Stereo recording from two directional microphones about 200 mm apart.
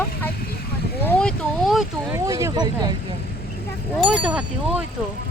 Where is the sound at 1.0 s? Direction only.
10° left (ahead or behind).